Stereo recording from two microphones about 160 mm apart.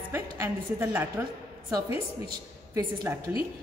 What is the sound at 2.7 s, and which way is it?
Speech, 20° right (ahead or behind).